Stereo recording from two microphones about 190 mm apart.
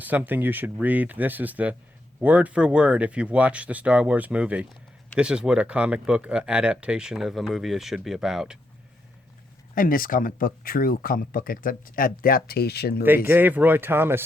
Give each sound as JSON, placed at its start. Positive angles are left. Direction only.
{"t": 0.0, "sound": "speech", "side_deg": -10}
{"t": 9.7, "sound": "speech", "side_deg": 45}
{"t": 13.1, "sound": "speech", "side_deg": -10}